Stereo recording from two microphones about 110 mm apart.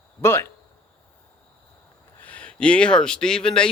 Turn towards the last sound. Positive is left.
turn(degrees=5)  # may be behind; listen again after turning